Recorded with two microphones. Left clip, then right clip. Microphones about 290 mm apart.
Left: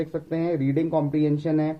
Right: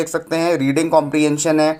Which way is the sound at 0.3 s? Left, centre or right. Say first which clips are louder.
Right 8 dB; centre.